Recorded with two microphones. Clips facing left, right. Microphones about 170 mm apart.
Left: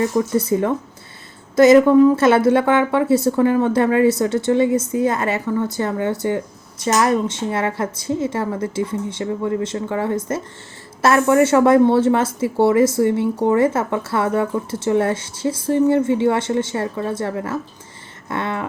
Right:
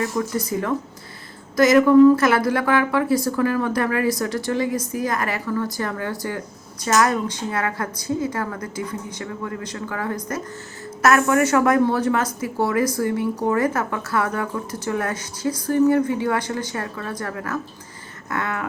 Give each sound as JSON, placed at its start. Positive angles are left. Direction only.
{"t": 0.0, "sound": "a woman's voice", "side_deg": 25}